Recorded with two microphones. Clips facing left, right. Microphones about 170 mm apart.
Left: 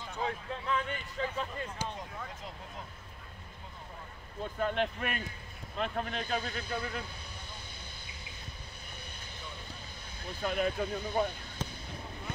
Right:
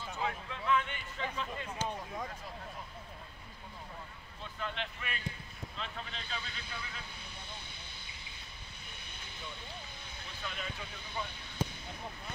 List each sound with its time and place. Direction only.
0.5 s speech: 40° left (ahead or behind)
1.8 s a sound: 10° left (ahead or behind)
4.4 s speech: 45° left (ahead or behind)
10.4 s speech: 50° left (ahead or behind)
11.6 s basketball bounce: 10° right (ahead or behind)